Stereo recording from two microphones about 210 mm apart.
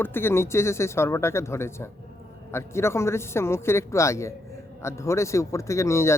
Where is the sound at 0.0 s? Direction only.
10° left (ahead or behind).